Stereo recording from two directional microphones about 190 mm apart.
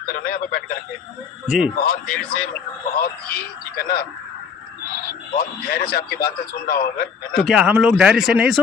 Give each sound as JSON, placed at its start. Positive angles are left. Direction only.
{"t": 0.1, "sound": "speech", "side_deg": 55}
{"t": 1.5, "sound": "speech", "side_deg": -5}
{"t": 1.7, "sound": "a man's voice", "side_deg": 50}
{"t": 5.4, "sound": "a man's voice", "side_deg": 55}
{"t": 7.4, "sound": "speech", "side_deg": -5}